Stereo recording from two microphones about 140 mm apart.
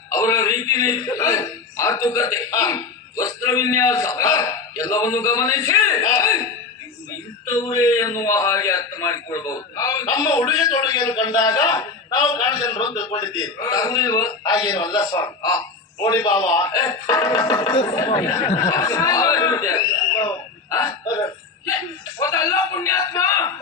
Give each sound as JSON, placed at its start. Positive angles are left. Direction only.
{"t": 0.1, "sound": "a man's voice", "side_deg": 25}
{"t": 7.5, "sound": "a man's voice", "side_deg": 25}
{"t": 18.4, "sound": "a man's voice", "side_deg": 25}
{"t": 22.2, "sound": "a man's voice", "side_deg": 20}